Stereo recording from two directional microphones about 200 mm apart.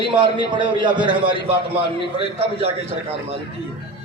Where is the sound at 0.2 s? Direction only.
25° right (ahead or behind).